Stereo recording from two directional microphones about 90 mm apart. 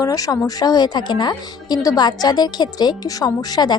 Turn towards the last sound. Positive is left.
turn(degrees=45)  # may be behind; listen again after turning